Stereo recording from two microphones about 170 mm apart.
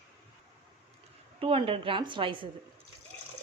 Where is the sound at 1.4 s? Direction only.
30° right (ahead or behind).